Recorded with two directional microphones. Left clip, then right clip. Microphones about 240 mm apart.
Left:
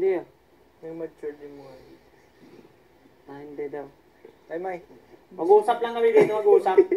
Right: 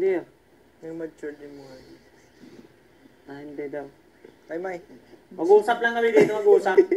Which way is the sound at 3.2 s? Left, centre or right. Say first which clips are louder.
Even; right.